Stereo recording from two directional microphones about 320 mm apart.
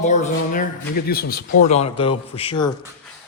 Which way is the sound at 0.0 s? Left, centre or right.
Left.